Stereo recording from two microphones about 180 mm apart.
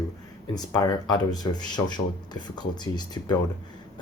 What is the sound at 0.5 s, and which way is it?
Speech, 20° left (ahead or behind).